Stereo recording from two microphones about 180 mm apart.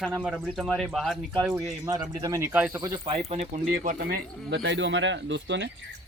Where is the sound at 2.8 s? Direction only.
25° right (ahead or behind).